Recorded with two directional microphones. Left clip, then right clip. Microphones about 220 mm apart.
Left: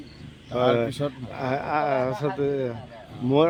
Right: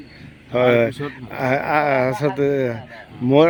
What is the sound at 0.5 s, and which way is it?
Speech, 30° right (ahead or behind).